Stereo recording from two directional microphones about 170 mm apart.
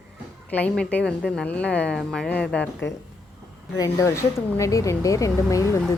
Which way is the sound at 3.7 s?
20° left (ahead or behind).